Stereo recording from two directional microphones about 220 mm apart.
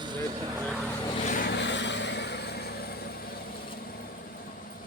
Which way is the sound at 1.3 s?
50° left (ahead or behind).